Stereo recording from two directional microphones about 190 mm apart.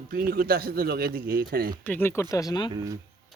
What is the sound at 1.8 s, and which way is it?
Speech, 10° left (ahead or behind).